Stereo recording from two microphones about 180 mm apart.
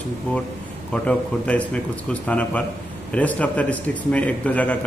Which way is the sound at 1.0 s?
5° left (ahead or behind).